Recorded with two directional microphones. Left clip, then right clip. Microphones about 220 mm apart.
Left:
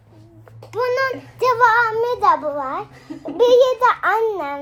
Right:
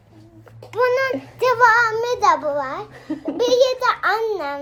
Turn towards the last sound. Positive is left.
turn(degrees=20)  # may be behind; listen again after turning